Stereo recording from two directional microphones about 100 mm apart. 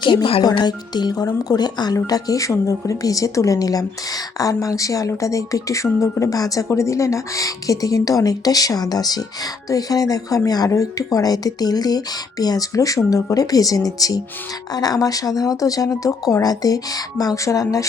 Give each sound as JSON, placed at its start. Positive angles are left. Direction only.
{"t": 0.0, "sound": "speech", "side_deg": 55}
{"t": 0.5, "sound": "speech", "side_deg": 45}